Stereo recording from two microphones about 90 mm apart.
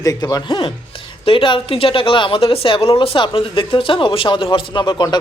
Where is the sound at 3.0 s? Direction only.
70° left (ahead or behind).